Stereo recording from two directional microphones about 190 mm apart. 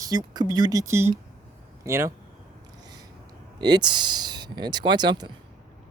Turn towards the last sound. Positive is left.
turn(degrees=-20)  # may be behind; listen again after turning